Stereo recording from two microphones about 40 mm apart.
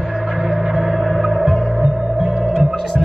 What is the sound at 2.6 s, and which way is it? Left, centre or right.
Hum, centre.